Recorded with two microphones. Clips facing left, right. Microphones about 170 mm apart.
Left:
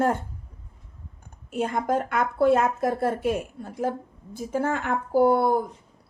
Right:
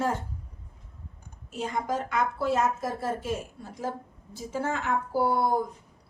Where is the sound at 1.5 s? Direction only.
55° left (ahead or behind).